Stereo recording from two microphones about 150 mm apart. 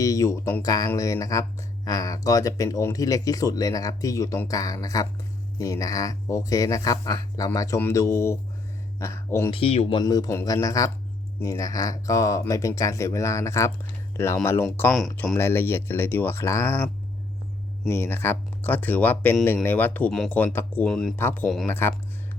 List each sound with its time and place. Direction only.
0.0 s speech: 20° left (ahead or behind)
9.5 s speech: 40° left (ahead or behind)
10.0 s speech: 25° left (ahead or behind); by 21.2 s 5° left (ahead or behind)
21.2 s speech: 15° left (ahead or behind)